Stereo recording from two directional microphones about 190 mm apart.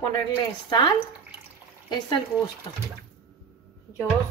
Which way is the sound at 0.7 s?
25° left (ahead or behind).